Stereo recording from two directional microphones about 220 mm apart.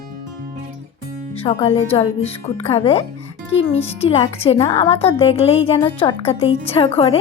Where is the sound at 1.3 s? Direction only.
25° left (ahead or behind).